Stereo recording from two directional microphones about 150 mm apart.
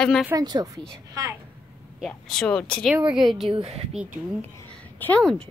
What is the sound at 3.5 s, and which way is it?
Speech, 40° right (ahead or behind).